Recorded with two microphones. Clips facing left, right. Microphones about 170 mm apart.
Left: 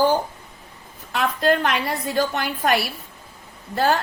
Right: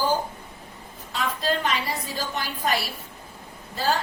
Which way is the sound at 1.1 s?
60° left (ahead or behind).